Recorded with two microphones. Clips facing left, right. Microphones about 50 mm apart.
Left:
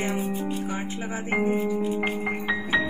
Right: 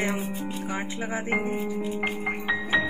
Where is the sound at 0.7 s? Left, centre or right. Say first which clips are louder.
Even; right.